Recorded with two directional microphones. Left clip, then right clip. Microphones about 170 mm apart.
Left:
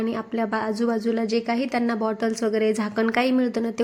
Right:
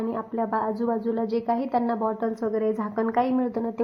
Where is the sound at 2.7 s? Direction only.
40° left (ahead or behind); by 3.8 s 20° left (ahead or behind).